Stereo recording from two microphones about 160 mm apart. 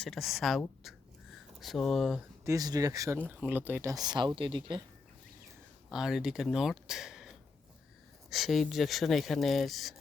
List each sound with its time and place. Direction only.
0.0 s speech: centre (ahead or behind)
0.8 s a sound: centre (ahead or behind)
2.4 s speech: 20° right (ahead or behind)
5.9 s speech: 5° right (ahead or behind)